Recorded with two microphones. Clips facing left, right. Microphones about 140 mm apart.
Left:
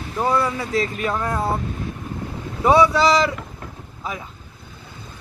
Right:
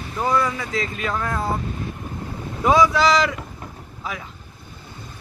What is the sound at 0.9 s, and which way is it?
Speech, 10° left (ahead or behind).